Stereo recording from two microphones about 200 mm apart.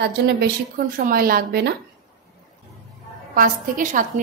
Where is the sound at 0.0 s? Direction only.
55° right (ahead or behind).